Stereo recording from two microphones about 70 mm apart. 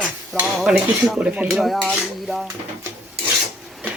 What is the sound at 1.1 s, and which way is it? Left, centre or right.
Speech, centre.